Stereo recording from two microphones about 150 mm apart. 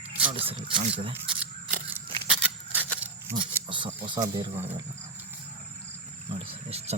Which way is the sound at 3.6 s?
35° right (ahead or behind).